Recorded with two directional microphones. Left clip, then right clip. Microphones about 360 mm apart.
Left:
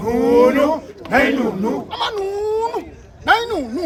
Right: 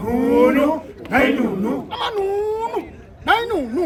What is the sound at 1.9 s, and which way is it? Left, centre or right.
Speech, centre.